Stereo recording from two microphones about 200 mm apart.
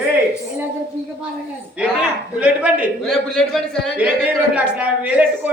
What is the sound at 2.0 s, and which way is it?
A man's voice, 5° right (ahead or behind).